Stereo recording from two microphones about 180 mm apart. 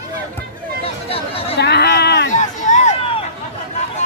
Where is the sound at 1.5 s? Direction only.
70° left (ahead or behind).